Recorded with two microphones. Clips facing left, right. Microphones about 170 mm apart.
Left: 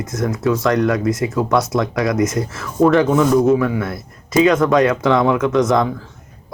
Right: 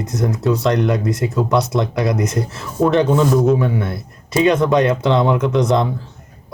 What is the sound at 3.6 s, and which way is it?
Speech, 30° right (ahead or behind).